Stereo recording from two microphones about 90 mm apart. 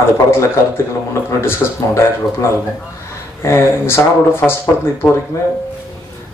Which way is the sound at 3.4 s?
30° left (ahead or behind).